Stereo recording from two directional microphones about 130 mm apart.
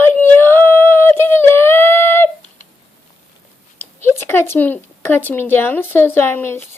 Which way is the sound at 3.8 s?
15° left (ahead or behind).